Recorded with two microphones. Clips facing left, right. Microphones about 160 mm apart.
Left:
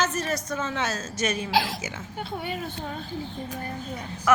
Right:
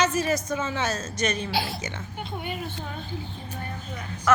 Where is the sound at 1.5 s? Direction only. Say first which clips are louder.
Left 4 dB; 90° left.